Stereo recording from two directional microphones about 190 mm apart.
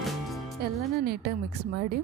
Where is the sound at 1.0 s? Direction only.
60° right (ahead or behind).